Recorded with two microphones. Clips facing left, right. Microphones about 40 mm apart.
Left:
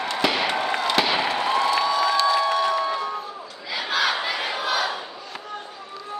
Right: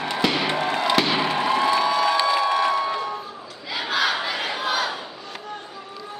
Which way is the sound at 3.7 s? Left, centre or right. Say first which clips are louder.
Even; centre.